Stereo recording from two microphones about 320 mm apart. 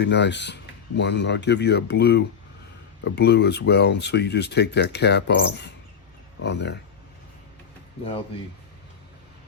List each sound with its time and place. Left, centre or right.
0.0 s speech: left